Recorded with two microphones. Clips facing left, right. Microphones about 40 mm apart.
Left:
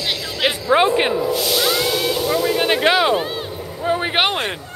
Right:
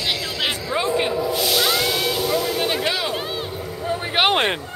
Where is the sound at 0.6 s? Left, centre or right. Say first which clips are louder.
Left 8 dB; left.